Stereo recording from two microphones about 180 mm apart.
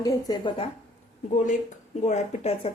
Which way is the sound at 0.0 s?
20° left (ahead or behind).